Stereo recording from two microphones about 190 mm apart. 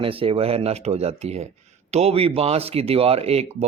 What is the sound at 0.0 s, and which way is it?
Speech, 30° right (ahead or behind).